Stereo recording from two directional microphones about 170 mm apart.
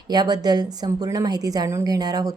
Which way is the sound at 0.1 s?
25° right (ahead or behind).